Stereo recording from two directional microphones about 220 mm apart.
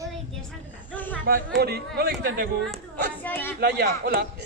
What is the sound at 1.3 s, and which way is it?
A woman's voice, 45° right (ahead or behind).